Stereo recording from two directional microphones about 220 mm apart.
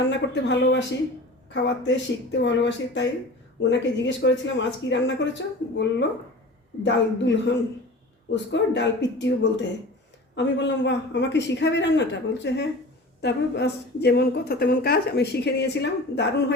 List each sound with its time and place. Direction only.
0.1 s a woman's voice: 50° left (ahead or behind)